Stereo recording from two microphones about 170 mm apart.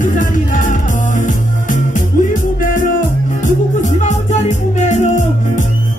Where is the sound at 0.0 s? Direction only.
50° left (ahead or behind).